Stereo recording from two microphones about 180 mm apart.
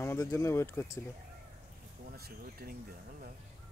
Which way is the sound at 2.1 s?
55° right (ahead or behind).